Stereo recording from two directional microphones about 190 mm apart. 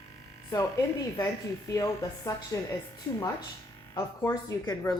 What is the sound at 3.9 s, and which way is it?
Speech, 20° left (ahead or behind).